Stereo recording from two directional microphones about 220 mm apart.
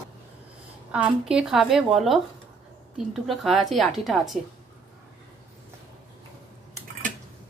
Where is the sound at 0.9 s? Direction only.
5° right (ahead or behind).